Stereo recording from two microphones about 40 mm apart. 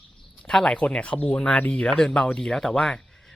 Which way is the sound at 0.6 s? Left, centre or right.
Left.